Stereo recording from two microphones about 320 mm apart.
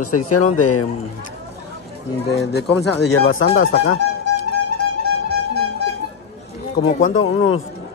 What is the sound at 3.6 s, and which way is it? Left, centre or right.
Music, left.